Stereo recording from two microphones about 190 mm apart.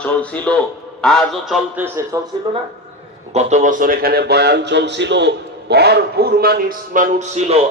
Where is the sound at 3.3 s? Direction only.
35° right (ahead or behind).